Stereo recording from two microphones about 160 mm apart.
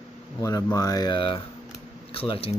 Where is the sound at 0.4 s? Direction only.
20° left (ahead or behind).